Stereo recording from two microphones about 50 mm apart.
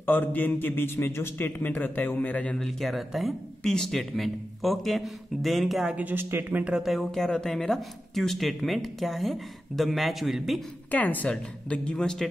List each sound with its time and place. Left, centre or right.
0.0 s a man's voice: left
1.6 s a woman's voice: left
2.8 s speech: centre
3.6 s speech: centre
6.3 s speech: right
6.7 s speech: centre
7.0 s speech: centre
10.9 s a woman's voice: left
11.9 s a man's voice: centre